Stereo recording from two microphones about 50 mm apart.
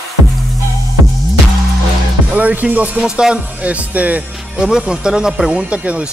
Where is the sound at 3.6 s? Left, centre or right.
Right.